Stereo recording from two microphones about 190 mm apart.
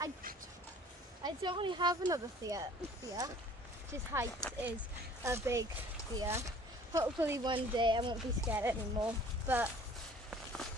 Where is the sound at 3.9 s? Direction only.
15° right (ahead or behind).